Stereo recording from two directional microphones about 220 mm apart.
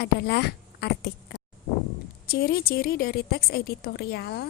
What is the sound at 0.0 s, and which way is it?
A woman's voice, 50° left (ahead or behind).